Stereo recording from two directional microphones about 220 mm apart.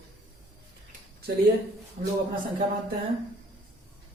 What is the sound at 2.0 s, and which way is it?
Speech, 30° right (ahead or behind).